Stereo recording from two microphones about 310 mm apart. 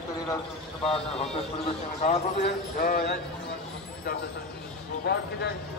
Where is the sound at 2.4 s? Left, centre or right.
Left.